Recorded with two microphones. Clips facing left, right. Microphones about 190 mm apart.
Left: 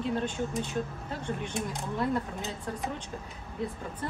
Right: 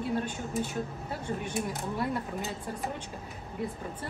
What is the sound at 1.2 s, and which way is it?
Speech, 5° right (ahead or behind).